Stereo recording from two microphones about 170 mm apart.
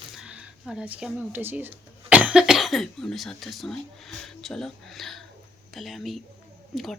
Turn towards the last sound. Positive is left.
turn(degrees=0)  # may be behind; listen again after turning